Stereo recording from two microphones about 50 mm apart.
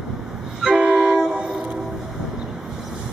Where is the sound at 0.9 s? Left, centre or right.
Centre.